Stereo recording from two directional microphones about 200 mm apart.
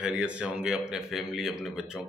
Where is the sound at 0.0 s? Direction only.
5° right (ahead or behind).